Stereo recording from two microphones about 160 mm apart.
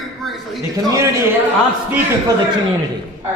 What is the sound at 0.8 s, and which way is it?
Speech, 20° right (ahead or behind).